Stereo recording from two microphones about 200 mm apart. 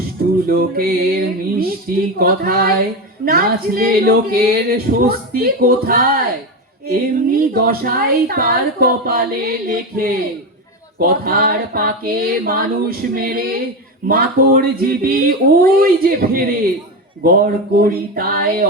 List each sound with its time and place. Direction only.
0.4 s speech: 45° right (ahead or behind)